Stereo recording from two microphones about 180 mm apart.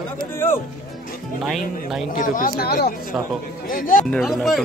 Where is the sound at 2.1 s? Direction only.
50° left (ahead or behind).